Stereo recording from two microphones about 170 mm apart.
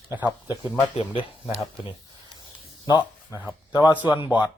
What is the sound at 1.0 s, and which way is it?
Speech, 30° left (ahead or behind).